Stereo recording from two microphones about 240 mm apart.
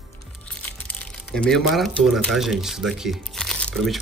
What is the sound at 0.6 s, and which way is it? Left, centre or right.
Speech, centre.